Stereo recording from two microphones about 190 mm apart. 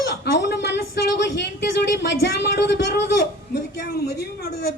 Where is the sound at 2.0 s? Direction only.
60° left (ahead or behind).